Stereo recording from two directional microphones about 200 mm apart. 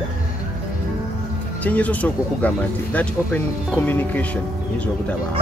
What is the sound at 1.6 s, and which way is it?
Speech, 5° left (ahead or behind).